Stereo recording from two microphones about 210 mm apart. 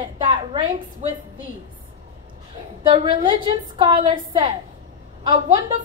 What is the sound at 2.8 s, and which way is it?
A woman's voice, 25° right (ahead or behind).